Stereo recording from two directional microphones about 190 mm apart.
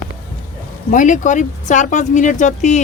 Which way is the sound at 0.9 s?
40° left (ahead or behind).